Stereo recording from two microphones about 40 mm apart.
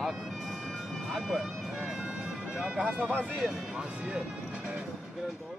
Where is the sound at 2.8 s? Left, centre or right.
Right.